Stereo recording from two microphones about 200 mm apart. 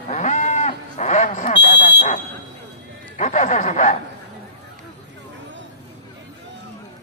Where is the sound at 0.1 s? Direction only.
35° left (ahead or behind).